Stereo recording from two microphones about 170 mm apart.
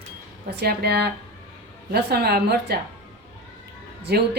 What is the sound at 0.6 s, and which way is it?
A woman's voice, 70° right (ahead or behind).